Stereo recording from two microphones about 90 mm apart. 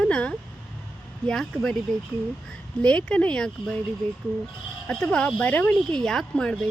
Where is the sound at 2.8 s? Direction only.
10° left (ahead or behind).